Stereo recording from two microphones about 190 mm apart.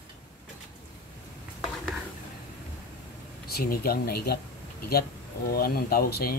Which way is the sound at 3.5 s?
50° left (ahead or behind).